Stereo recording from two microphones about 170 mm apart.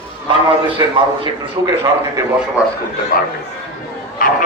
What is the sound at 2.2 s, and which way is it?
Speech, 15° right (ahead or behind).